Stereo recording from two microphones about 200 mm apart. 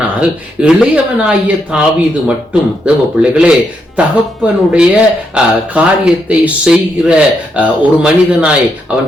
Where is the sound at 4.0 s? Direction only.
5° right (ahead or behind).